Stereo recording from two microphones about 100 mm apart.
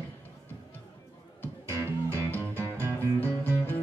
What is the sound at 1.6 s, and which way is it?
Music, 25° right (ahead or behind).